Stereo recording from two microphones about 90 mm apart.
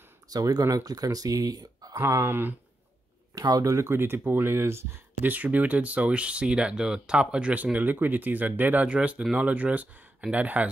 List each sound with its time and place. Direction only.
0.3 s speech: 45° right (ahead or behind)
2.0 s speech: 30° right (ahead or behind)
3.3 s speech: 45° right (ahead or behind)
3.7 s speech: 30° right (ahead or behind)